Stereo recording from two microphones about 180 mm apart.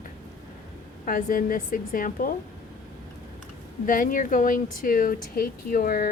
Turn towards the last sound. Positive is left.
turn(degrees=55)  # may be behind; listen again after turning